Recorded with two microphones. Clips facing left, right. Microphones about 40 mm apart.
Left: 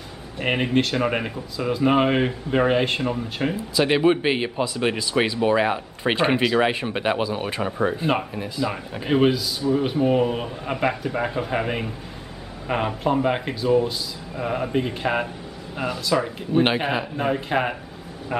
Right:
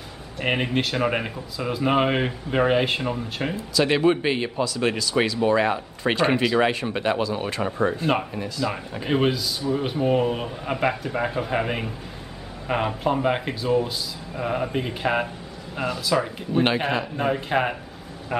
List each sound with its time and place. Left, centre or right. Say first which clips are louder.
0.4 s speech: left 2 dB; centre
3.5 s speech: even; centre
6.4 s speech: left 1 dB; centre
6.7 s speech: left 1 dB; centre